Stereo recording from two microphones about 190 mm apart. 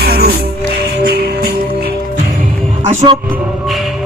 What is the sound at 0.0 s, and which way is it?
Music, 55° right (ahead or behind).